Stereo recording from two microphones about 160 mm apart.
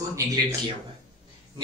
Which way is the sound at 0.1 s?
20° right (ahead or behind).